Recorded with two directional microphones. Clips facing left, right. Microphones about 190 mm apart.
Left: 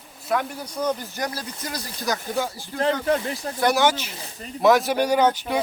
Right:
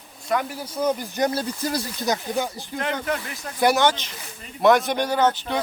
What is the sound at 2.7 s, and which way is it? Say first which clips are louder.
Speech: left 5 dB; 30° left (ahead or behind).